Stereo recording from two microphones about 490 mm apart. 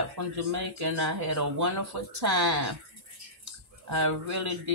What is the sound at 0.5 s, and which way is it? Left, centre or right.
Speech, right.